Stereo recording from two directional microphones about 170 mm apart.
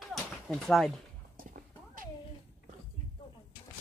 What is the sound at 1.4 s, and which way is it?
Clip-clop, 55° right (ahead or behind).